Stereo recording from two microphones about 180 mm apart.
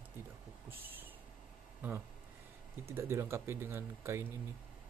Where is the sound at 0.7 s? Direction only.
10° right (ahead or behind).